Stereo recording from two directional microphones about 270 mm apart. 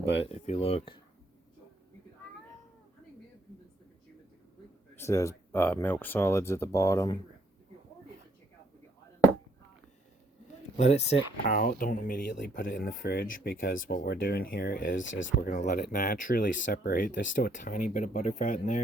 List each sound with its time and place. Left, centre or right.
0.3 s speech: left
4.9 s speech: centre
10.8 s speech: left
15.1 s speech: left
15.4 s speech: left